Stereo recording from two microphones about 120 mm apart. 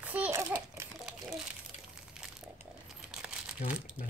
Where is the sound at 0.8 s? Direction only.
25° right (ahead or behind).